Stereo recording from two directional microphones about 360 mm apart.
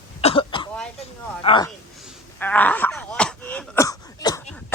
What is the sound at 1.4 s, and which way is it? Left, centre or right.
Speech, centre.